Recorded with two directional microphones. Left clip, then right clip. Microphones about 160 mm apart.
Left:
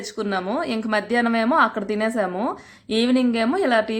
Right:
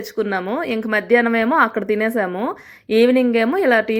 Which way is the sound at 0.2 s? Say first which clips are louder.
Right 3 dB; 25° right (ahead or behind).